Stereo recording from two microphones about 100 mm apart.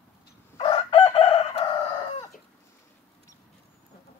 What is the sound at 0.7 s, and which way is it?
Chicken, 60° left (ahead or behind).